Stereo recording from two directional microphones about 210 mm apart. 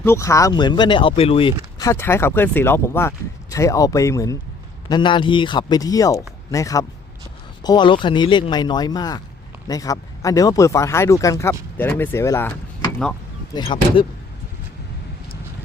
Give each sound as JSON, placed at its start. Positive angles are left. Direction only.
{"t": 0.0, "sound": "speech", "side_deg": 10}
{"t": 1.8, "sound": "speech", "side_deg": 10}
{"t": 13.5, "sound": "speech", "side_deg": 20}